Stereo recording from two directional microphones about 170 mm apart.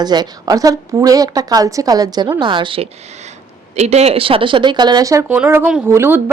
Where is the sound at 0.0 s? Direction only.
25° right (ahead or behind).